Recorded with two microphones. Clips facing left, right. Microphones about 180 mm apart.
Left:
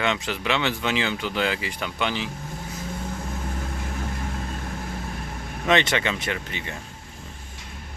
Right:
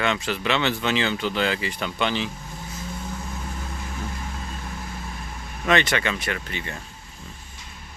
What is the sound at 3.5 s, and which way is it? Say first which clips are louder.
Vehicle: left 3 dB; 50° left (ahead or behind).